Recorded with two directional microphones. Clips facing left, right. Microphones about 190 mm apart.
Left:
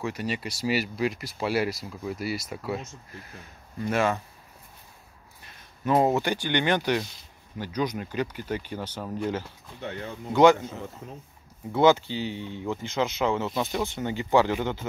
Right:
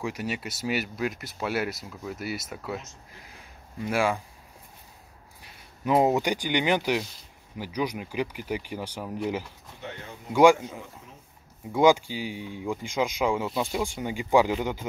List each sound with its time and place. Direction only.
0.0 s speech: 10° right (ahead or behind)
3.8 s speech: 10° right (ahead or behind)
5.4 s speech: 15° right (ahead or behind)
11.0 s speech: 55° left (ahead or behind)
11.7 s speech: 10° right (ahead or behind)